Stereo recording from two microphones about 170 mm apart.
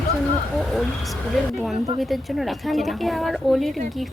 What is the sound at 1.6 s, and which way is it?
A woman's voice, centre (ahead or behind).